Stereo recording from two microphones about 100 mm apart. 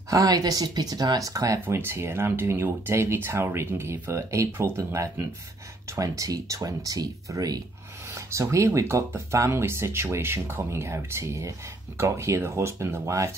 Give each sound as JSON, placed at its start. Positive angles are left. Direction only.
{"t": 0.1, "sound": "speech", "side_deg": -35}